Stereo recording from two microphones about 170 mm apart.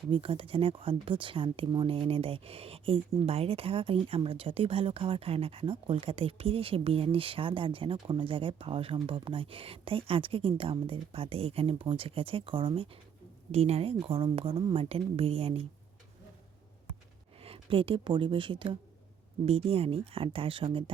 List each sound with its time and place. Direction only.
0.1 s speech: 30° right (ahead or behind)
17.4 s speech: 35° right (ahead or behind)